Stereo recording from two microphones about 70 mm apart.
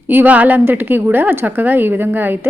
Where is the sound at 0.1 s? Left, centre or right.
Right.